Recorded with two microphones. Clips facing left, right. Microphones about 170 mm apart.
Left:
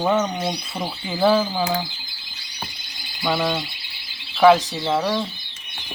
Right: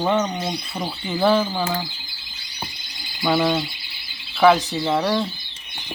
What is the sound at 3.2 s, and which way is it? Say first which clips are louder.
Speech: right 3 dB; 5° right (ahead or behind).